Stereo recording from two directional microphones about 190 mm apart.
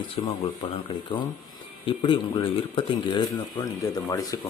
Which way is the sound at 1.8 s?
25° left (ahead or behind).